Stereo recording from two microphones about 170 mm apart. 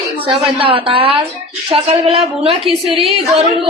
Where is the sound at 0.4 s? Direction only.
35° right (ahead or behind).